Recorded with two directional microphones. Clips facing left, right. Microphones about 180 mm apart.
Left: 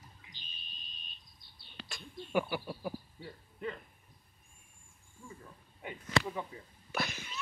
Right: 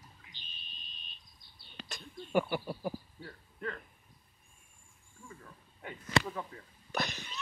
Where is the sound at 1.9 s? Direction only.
5° left (ahead or behind).